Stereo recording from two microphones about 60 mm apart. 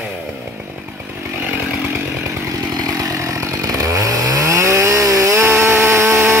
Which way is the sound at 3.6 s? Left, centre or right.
Right.